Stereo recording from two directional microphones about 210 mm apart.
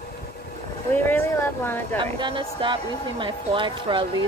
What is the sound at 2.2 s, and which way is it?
A woman's voice, 25° right (ahead or behind).